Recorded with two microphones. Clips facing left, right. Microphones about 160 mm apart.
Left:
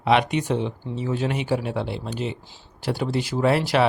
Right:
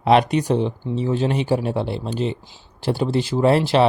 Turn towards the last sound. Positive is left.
turn(degrees=-30)  # may be behind; listen again after turning